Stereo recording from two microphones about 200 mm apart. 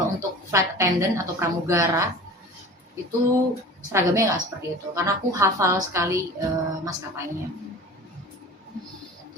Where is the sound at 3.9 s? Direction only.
15° right (ahead or behind).